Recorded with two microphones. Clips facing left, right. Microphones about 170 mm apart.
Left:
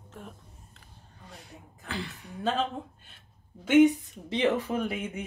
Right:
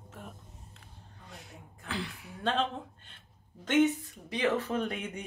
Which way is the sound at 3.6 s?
10° left (ahead or behind).